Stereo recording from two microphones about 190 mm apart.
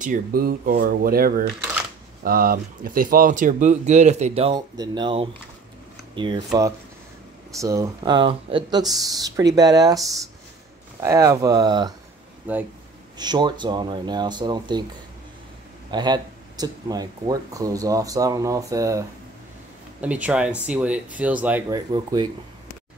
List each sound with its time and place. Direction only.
0.0 s speech: 45° right (ahead or behind); by 11.9 s 20° right (ahead or behind)
12.5 s speech: 10° right (ahead or behind)
13.2 s speech: 20° right (ahead or behind)
15.9 s speech: 20° right (ahead or behind)
21.9 s speech: 25° right (ahead or behind)